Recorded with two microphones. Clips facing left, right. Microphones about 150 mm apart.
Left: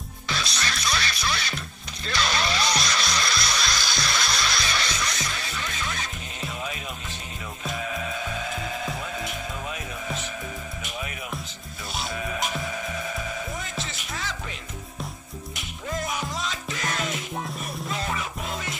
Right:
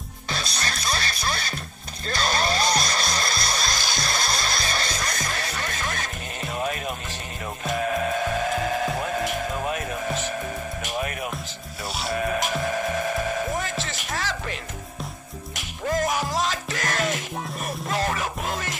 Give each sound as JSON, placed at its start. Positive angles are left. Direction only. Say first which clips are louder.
{"t": 0.3, "sound": "music", "louder": "even", "side_deg": -45}
{"t": 12.1, "sound": "music", "louder": "right 6 dB", "side_deg": -55}
{"t": 13.3, "sound": "a sound", "louder": "right 7 dB", "side_deg": -50}
{"t": 14.1, "sound": "music", "louder": "right 5 dB", "side_deg": -85}
{"t": 15.9, "sound": "music", "louder": "right 6 dB", "side_deg": -45}